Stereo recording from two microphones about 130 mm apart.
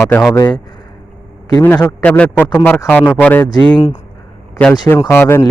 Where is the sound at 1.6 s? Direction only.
15° left (ahead or behind).